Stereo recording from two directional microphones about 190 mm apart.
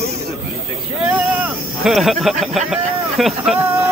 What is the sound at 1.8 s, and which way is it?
Speech, centre (ahead or behind).